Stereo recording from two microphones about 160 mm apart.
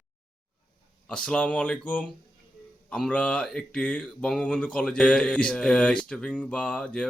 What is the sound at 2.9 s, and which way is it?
Speech, 5° left (ahead or behind).